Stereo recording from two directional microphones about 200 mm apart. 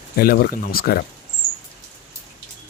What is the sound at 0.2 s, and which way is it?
Speech, 50° left (ahead or behind).